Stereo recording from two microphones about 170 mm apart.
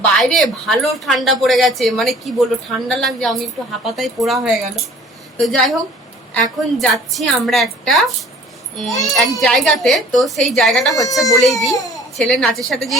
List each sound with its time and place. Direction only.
0.0 s speech: 5° left (ahead or behind)
5.4 s speech: centre (ahead or behind)
10.9 s a child's voice: 20° left (ahead or behind)
12.1 s speech: centre (ahead or behind)